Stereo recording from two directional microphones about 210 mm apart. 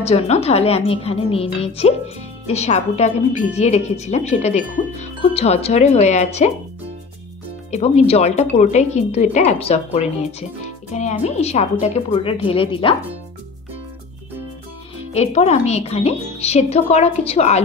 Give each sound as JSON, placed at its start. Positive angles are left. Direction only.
{"t": 0.0, "sound": "a woman's voice", "side_deg": 30}
{"t": 7.7, "sound": "a woman's voice", "side_deg": 30}
{"t": 15.1, "sound": "a woman's voice", "side_deg": 30}